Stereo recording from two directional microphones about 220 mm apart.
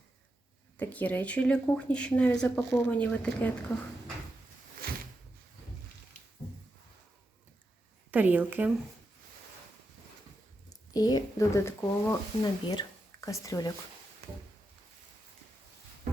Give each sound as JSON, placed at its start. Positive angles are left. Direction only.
{"t": 0.8, "sound": "speech", "side_deg": 5}
{"t": 4.8, "sound": "a sound", "side_deg": -40}
{"t": 8.1, "sound": "a woman's voice", "side_deg": -10}
{"t": 10.7, "sound": "speech", "side_deg": 15}